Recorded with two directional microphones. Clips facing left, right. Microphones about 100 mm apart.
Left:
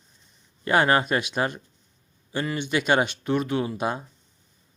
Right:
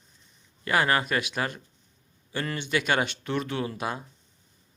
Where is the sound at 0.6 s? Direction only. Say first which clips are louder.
Left 4 dB; 25° left (ahead or behind).